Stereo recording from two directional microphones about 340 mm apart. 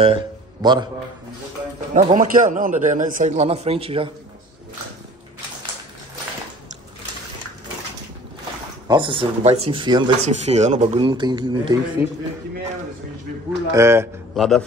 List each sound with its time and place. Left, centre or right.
0.0 s a man's voice: centre
2.0 s speech: right
8.8 s speech: centre
13.7 s speech: centre